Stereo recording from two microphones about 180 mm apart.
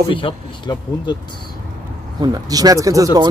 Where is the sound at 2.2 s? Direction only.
20° right (ahead or behind).